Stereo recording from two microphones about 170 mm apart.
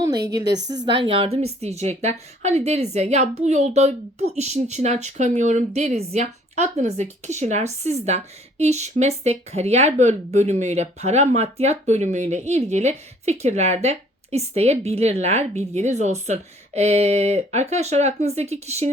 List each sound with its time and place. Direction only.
0.4 s a woman's voice: 90° right
0.9 s speech: 30° right (ahead or behind)